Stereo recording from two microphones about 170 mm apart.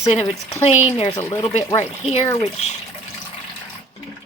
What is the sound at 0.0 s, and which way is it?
Speech, 40° left (ahead or behind).